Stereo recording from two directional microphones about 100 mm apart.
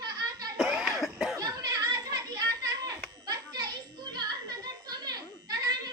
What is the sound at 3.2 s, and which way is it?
Children playing, 45° right (ahead or behind).